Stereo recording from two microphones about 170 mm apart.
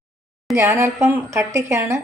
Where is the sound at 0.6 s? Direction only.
15° right (ahead or behind).